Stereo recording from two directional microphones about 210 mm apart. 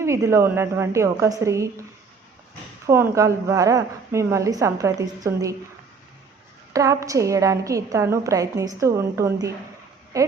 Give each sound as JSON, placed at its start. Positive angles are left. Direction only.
{"t": 0.0, "sound": "a woman's voice", "side_deg": -15}
{"t": 2.8, "sound": "a woman's voice", "side_deg": -15}
{"t": 6.7, "sound": "a woman's voice", "side_deg": -15}